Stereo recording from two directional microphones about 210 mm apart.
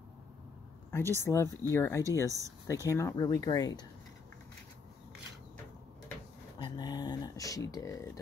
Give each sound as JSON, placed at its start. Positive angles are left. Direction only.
{"t": 0.9, "sound": "speech", "side_deg": 10}
{"t": 6.6, "sound": "speech", "side_deg": 20}